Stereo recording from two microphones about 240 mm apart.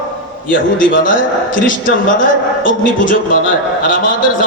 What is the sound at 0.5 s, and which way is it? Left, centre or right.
A man's voice, left.